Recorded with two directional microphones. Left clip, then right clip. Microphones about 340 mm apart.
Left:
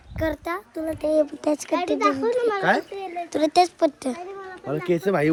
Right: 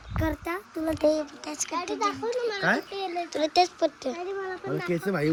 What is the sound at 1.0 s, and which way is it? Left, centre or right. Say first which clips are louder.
Speech: left 1 dB; centre.